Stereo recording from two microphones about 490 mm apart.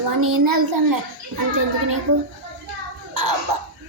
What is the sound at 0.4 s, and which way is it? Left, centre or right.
Child singing, right.